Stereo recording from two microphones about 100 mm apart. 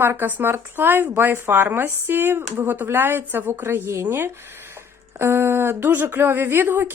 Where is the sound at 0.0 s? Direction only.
20° right (ahead or behind).